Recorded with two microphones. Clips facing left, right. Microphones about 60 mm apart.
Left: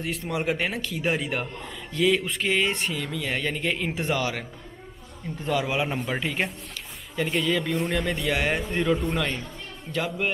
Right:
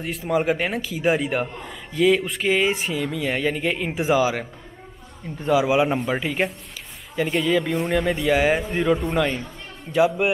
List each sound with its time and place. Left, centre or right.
0.0 s a man's voice: centre